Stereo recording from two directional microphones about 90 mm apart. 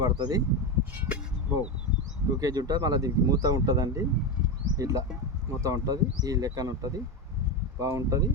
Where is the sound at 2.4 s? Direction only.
45° right (ahead or behind).